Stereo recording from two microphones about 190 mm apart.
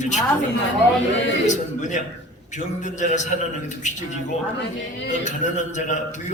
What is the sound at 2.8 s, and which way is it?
Speech, 40° left (ahead or behind).